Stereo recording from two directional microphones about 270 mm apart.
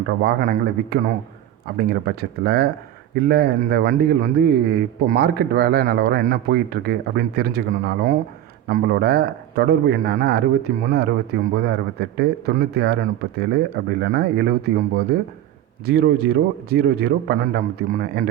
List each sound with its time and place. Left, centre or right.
0.2 s a man's voice: right